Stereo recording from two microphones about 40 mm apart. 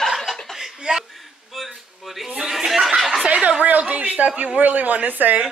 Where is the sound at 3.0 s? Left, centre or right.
Centre.